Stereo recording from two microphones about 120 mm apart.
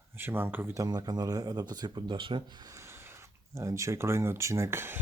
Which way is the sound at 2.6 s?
25° right (ahead or behind).